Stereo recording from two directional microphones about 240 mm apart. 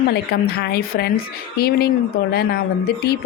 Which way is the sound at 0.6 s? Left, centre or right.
Left.